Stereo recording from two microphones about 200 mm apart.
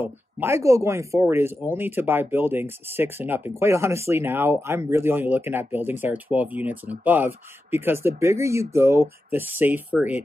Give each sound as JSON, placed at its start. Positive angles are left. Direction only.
{"t": 0.0, "sound": "speech", "side_deg": -10}